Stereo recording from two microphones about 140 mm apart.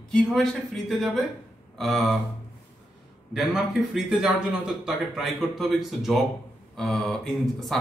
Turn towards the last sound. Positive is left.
turn(degrees=5)  # may be behind; listen again after turning